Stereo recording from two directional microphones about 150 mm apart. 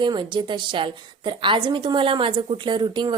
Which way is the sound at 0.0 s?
30° right (ahead or behind).